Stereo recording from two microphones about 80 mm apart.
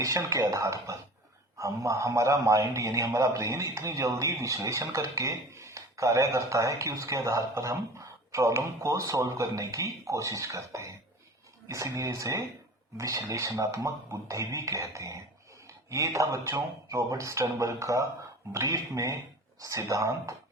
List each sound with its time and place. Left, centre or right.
0.0 s a man's voice: right